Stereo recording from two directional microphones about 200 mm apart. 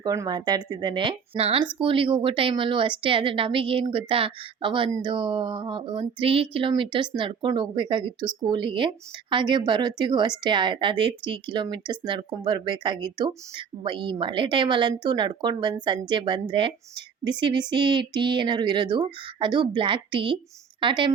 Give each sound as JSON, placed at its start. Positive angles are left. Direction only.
{"t": 0.0, "sound": "a woman's voice", "side_deg": -20}